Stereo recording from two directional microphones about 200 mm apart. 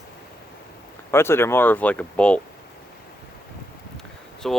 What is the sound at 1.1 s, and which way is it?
Speech, 10° left (ahead or behind).